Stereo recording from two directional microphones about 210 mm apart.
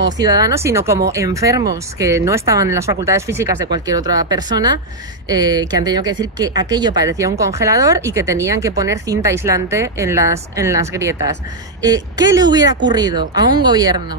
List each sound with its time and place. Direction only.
0.0 s speech: 20° right (ahead or behind)